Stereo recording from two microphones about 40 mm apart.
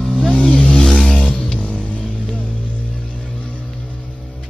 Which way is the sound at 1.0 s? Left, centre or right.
Centre.